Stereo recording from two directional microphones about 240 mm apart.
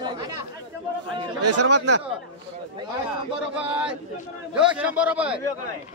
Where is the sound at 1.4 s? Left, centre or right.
Right.